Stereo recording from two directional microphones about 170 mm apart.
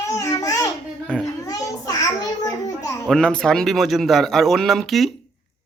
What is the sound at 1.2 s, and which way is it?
Children playing, 20° left (ahead or behind).